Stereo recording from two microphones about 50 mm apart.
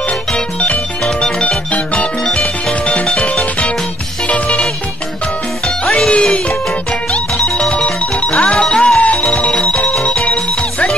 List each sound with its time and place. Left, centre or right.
1.0 s music: centre
5.9 s music: centre